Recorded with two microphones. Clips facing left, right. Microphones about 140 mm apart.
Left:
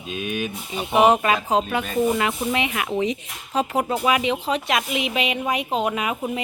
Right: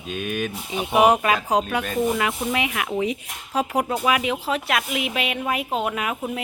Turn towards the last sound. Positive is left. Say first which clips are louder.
# left 2 dB
turn(degrees=0)  # may be behind; listen again after turning